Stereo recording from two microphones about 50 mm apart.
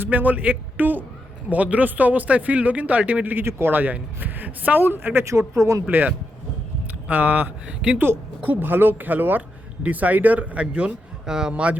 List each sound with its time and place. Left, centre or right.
0.0 s a man's voice: right
3.3 s speech: right
3.8 s a man's voice: right
5.2 s speech: right
7.1 s a man's voice: right
7.9 s a man's voice: right
11.3 s speech: centre